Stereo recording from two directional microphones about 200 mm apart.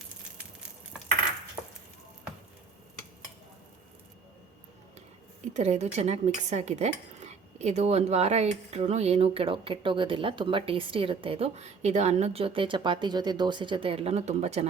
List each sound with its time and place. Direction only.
5.5 s speech: 35° right (ahead or behind)